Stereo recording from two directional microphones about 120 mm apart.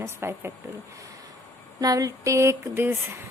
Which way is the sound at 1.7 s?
30° right (ahead or behind).